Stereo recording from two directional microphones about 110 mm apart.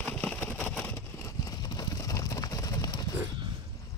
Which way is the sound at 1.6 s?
35° left (ahead or behind).